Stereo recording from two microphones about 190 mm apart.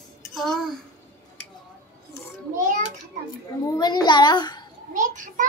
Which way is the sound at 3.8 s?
20° left (ahead or behind).